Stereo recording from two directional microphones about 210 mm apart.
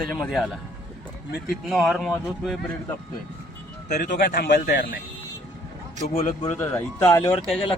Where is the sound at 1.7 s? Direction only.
Centre (ahead or behind).